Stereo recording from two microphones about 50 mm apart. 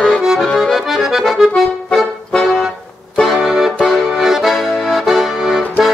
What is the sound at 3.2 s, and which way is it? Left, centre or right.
Accordion, centre.